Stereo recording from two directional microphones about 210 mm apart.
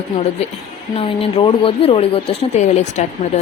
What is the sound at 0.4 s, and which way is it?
Speech, 30° left (ahead or behind).